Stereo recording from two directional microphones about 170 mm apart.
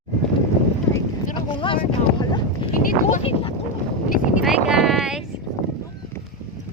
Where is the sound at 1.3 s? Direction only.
30° left (ahead or behind).